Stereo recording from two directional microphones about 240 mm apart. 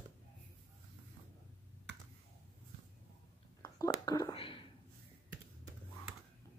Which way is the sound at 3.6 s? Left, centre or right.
Centre.